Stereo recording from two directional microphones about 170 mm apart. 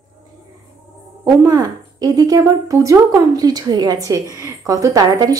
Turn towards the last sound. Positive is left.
turn(degrees=-20)  # may be behind; listen again after turning